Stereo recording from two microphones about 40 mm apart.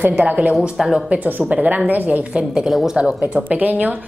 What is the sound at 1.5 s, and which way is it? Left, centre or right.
Speech, right.